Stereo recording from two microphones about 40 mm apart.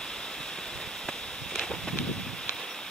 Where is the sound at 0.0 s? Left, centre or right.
Centre.